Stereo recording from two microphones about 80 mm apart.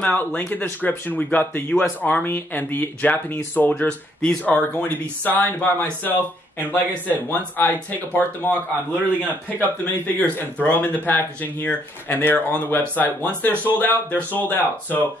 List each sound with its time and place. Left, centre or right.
0.0 s speech: centre
9.6 s speech: left